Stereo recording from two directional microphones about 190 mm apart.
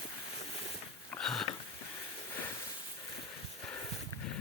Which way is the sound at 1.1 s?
5° left (ahead or behind).